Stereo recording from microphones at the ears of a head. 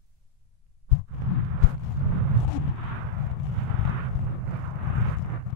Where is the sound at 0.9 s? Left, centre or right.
Left.